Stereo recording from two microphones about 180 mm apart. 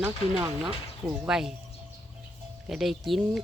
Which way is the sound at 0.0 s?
10° right (ahead or behind).